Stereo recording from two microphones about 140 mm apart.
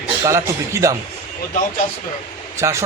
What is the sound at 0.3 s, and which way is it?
Speech, 20° right (ahead or behind).